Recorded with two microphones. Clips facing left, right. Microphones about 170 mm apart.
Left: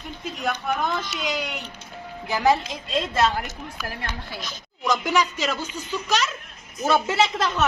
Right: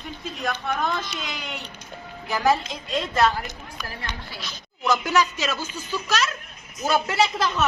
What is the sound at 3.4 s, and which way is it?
A woman's voice, 5° left (ahead or behind).